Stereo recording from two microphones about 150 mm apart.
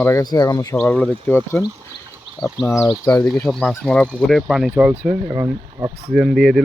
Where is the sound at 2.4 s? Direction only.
Centre (ahead or behind).